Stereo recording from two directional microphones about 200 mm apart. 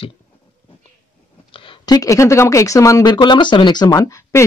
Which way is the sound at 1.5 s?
25° left (ahead or behind).